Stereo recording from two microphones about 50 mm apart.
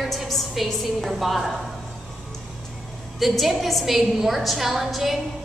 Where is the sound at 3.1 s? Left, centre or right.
Centre.